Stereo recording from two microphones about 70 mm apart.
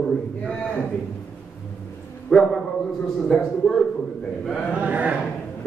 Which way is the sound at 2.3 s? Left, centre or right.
Centre.